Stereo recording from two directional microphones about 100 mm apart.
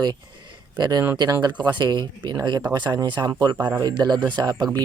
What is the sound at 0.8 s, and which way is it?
Speech, 40° right (ahead or behind).